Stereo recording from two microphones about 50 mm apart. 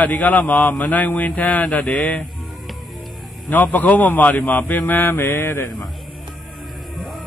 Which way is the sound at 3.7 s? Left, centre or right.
Left.